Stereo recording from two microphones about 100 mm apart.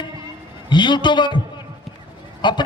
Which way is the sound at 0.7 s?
50° left (ahead or behind).